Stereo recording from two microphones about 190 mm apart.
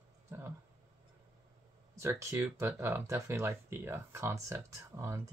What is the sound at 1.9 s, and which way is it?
Speech, 15° right (ahead or behind).